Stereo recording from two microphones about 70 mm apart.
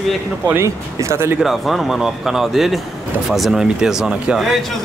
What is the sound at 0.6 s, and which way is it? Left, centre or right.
Speech, right.